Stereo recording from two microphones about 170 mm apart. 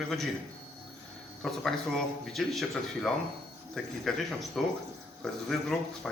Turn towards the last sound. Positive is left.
turn(degrees=5)  # may be behind; listen again after turning